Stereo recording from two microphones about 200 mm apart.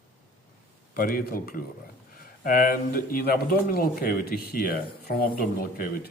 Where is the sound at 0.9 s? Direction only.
45° left (ahead or behind).